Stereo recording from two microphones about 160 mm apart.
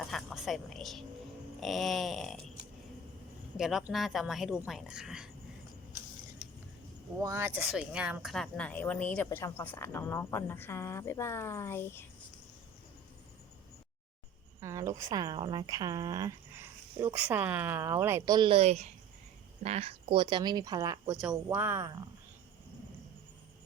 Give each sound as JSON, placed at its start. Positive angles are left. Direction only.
{"t": 0.1, "sound": "speech", "side_deg": 0}
{"t": 3.6, "sound": "speech", "side_deg": 0}
{"t": 7.2, "sound": "speech", "side_deg": -20}
{"t": 7.5, "sound": "speech", "side_deg": -5}
{"t": 14.6, "sound": "speech", "side_deg": -20}
{"t": 18.3, "sound": "speech", "side_deg": -30}
{"t": 21.1, "sound": "speech", "side_deg": -5}